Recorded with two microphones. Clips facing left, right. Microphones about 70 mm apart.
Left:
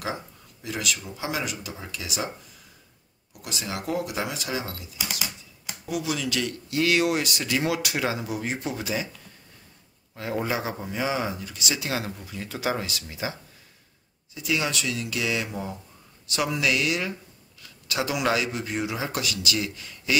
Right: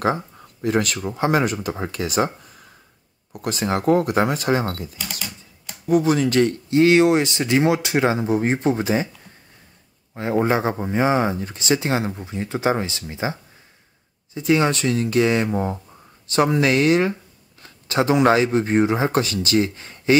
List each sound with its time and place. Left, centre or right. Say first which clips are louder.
0.0 s speech: right 10 dB; right
10.1 s speech: right 8 dB; right